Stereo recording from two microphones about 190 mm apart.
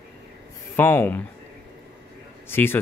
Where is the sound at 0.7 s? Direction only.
10° left (ahead or behind).